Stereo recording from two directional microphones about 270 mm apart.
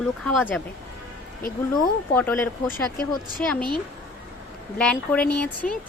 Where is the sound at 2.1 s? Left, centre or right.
Centre.